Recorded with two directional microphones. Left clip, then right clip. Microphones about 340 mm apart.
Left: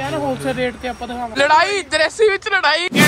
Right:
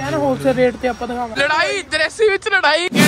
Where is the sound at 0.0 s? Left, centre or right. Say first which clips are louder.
Right 4 dB; centre.